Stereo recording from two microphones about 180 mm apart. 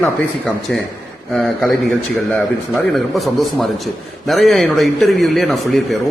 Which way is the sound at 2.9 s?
Centre (ahead or behind).